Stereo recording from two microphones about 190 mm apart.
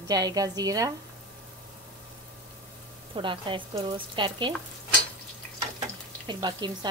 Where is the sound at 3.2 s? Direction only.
25° right (ahead or behind).